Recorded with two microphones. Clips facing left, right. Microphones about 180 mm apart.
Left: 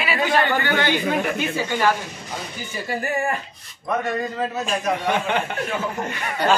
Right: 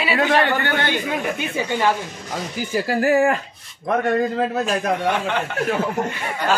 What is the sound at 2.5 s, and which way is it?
Speech, 90° right.